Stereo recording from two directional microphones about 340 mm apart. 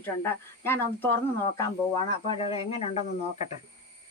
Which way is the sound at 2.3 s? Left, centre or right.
Centre.